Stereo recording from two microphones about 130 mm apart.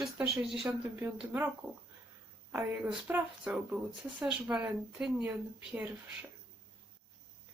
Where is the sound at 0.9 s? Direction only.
15° right (ahead or behind).